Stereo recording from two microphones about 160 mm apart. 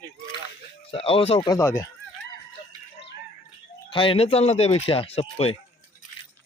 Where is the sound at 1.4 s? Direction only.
20° left (ahead or behind).